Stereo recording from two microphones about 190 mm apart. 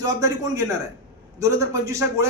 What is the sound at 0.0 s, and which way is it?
A man's voice, 15° right (ahead or behind).